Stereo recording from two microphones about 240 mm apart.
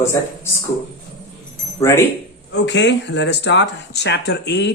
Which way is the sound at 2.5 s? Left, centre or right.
Left.